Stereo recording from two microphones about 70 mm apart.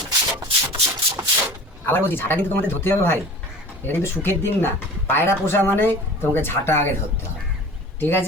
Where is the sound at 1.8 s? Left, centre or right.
Left.